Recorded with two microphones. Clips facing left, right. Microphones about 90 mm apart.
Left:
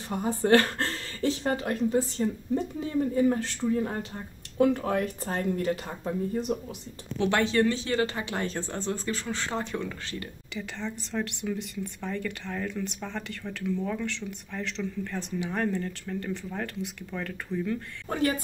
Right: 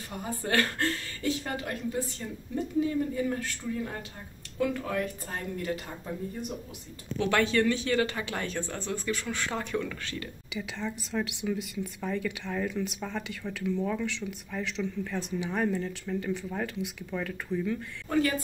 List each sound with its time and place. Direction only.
0.1 s speech: 25° left (ahead or behind)
7.2 s speech: 25° left (ahead or behind)
10.5 s speech: 5° right (ahead or behind)